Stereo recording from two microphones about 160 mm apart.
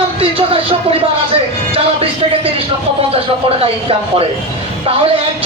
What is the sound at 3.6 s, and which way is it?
Speech, 35° right (ahead or behind).